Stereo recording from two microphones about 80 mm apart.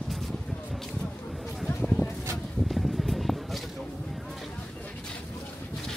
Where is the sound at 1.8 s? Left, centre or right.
Centre.